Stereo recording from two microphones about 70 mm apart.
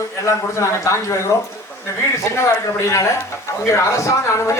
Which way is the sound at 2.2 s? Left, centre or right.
Left.